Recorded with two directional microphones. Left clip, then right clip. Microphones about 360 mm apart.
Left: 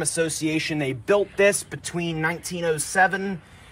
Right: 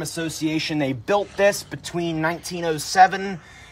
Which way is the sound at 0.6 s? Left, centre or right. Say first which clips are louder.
Right 1 dB; right.